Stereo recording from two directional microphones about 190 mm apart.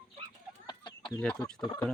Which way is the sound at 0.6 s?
25° left (ahead or behind).